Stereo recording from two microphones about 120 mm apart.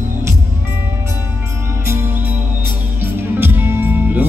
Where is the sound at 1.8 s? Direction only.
20° right (ahead or behind).